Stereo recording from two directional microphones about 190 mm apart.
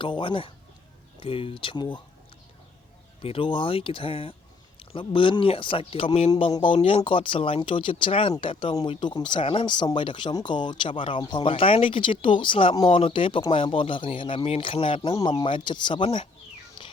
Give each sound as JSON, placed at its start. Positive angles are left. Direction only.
{"t": 0.0, "sound": "speech", "side_deg": 25}
{"t": 3.2, "sound": "speech", "side_deg": 30}